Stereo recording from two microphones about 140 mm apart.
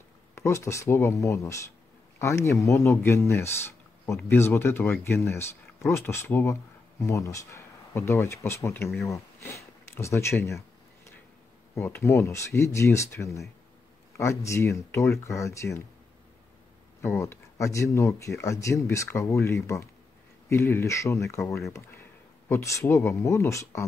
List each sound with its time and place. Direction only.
0.3 s speech: 20° left (ahead or behind)
11.7 s speech: 20° left (ahead or behind)
17.0 s speech: 20° left (ahead or behind)